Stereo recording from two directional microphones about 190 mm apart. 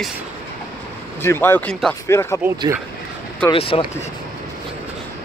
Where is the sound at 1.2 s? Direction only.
15° left (ahead or behind).